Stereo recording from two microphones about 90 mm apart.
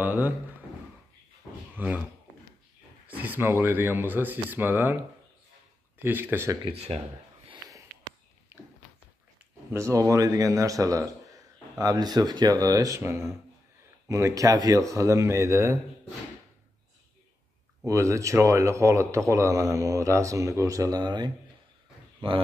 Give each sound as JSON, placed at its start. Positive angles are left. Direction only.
{"t": 0.0, "sound": "speech", "side_deg": -20}
{"t": 1.8, "sound": "speech", "side_deg": -20}
{"t": 3.1, "sound": "speech", "side_deg": -20}
{"t": 5.9, "sound": "speech", "side_deg": -20}
{"t": 8.5, "sound": "a sound", "side_deg": -25}
{"t": 9.7, "sound": "speech", "side_deg": -30}
{"t": 17.8, "sound": "speech", "side_deg": -35}
{"t": 21.0, "sound": "speech", "side_deg": -55}